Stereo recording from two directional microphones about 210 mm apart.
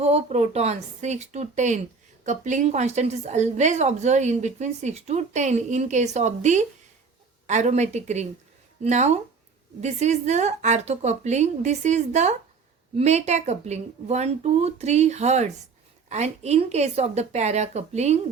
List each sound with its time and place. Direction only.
0.0 s a woman's voice: 30° right (ahead or behind)